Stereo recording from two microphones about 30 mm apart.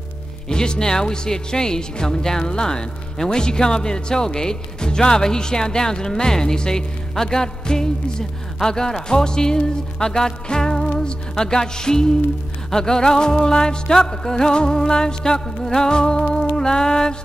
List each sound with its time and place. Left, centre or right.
0.5 s speech: left